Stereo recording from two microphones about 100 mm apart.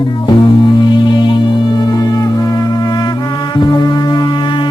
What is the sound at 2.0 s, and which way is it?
Music, 35° left (ahead or behind).